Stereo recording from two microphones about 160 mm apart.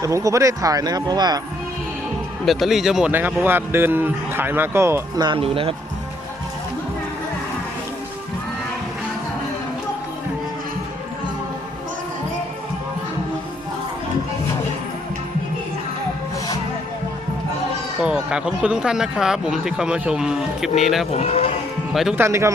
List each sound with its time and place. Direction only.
0.0 s speech: 20° right (ahead or behind)
2.4 s speech: centre (ahead or behind); by 5.2 s 15° right (ahead or behind)
5.2 s speech: 35° right (ahead or behind)
18.0 s speech: 5° right (ahead or behind)
21.1 s speech: 40° left (ahead or behind)
22.1 s speech: 15° right (ahead or behind)